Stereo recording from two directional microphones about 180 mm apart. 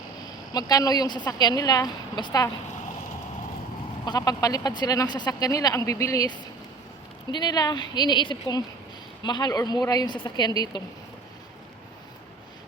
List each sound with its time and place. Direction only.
0.5 s speech: 20° left (ahead or behind)
4.0 s speech: 20° left (ahead or behind)